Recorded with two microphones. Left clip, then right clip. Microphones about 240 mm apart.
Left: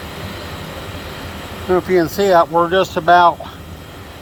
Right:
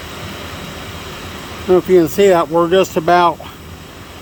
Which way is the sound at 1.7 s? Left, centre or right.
Right.